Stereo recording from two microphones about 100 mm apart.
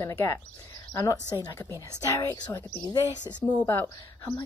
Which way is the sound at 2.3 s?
40° left (ahead or behind).